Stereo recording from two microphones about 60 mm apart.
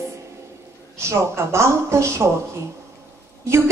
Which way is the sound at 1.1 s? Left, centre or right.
Right.